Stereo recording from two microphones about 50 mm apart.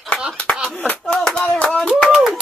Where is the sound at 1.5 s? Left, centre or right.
Centre.